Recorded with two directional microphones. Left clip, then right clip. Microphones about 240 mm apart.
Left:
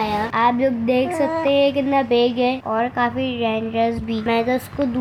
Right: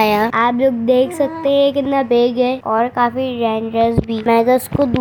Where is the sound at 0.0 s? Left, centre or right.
Right.